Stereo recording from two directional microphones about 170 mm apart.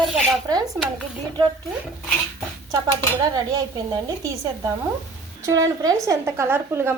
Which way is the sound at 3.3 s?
25° right (ahead or behind).